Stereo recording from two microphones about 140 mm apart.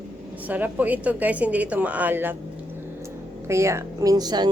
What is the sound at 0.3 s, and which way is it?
A woman's voice, 10° right (ahead or behind).